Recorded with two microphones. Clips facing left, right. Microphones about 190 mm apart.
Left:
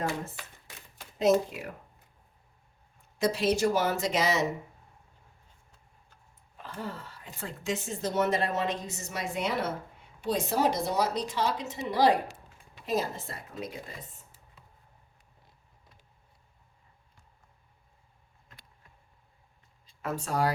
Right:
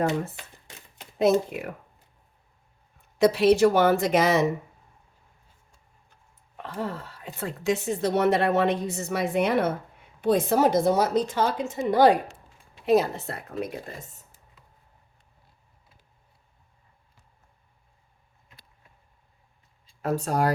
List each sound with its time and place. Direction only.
1.2 s speech: 60° right (ahead or behind)
3.2 s speech: 65° right (ahead or behind)
6.6 s a woman's voice: 70° right (ahead or behind)
12.8 s speech: 65° right (ahead or behind); by 14.4 s 45° right (ahead or behind)
20.0 s speech: 35° right (ahead or behind)